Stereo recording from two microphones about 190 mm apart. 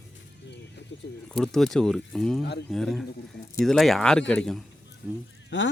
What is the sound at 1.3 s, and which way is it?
Speech, 5° left (ahead or behind).